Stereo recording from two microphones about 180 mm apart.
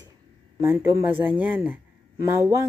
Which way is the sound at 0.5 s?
15° right (ahead or behind).